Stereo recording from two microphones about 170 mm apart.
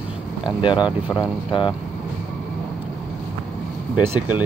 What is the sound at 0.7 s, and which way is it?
Speech, 5° right (ahead or behind).